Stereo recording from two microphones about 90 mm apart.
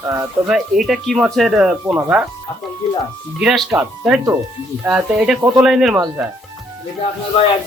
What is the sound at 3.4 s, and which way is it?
Speech, 5° right (ahead or behind).